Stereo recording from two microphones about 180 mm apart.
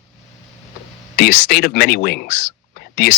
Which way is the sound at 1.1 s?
50° left (ahead or behind).